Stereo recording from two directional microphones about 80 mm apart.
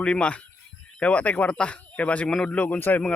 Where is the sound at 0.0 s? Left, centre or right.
Centre.